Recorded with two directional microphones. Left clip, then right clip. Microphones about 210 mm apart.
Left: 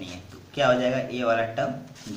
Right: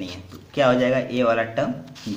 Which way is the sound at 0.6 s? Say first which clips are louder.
Right 3 dB; 45° right (ahead or behind).